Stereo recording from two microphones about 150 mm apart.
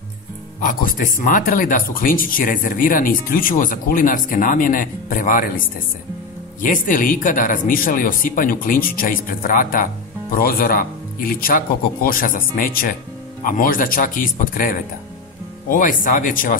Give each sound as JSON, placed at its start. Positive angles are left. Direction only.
{"t": 0.6, "sound": "speech", "side_deg": 65}
{"t": 6.6, "sound": "speech", "side_deg": 60}